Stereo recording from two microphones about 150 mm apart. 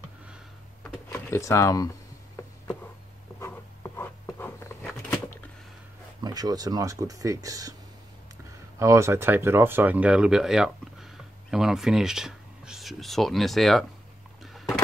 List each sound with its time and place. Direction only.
1.3 s speech: 20° left (ahead or behind)
3.3 s writing: 15° left (ahead or behind)
5.1 s a sound: 15° left (ahead or behind)
6.2 s speech: 25° right (ahead or behind)
8.7 s speech: 20° right (ahead or behind); by 13.8 s centre (ahead or behind)